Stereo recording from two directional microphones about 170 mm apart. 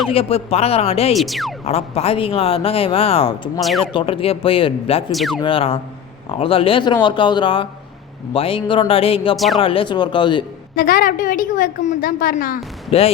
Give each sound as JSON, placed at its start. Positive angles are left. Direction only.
{"t": 0.1, "sound": "speech", "side_deg": 35}
{"t": 1.1, "sound": "speech", "side_deg": 0}
{"t": 1.6, "sound": "speech", "side_deg": 40}
{"t": 3.6, "sound": "speech", "side_deg": 0}
{"t": 3.9, "sound": "speech", "side_deg": 30}
{"t": 5.1, "sound": "speech", "side_deg": 0}
{"t": 5.4, "sound": "speech", "side_deg": 30}
{"t": 9.3, "sound": "speech", "side_deg": 0}
{"t": 9.6, "sound": "speech", "side_deg": 30}
{"t": 10.8, "sound": "a woman's voice", "side_deg": 55}
{"t": 12.9, "sound": "speech", "side_deg": 35}